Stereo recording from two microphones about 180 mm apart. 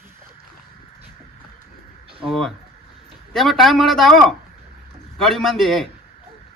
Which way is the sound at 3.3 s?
Centre (ahead or behind).